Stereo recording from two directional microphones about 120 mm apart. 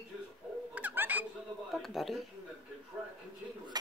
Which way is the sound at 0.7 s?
15° right (ahead or behind).